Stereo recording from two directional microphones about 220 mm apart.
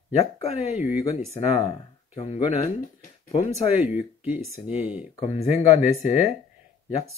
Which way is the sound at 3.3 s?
30° left (ahead or behind).